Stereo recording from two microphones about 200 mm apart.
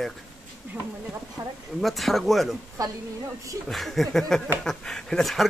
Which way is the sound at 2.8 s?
15° right (ahead or behind).